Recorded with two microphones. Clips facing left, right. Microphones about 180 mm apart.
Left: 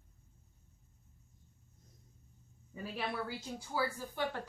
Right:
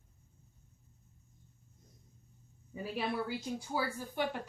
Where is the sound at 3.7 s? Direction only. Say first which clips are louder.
Even; 15° right (ahead or behind).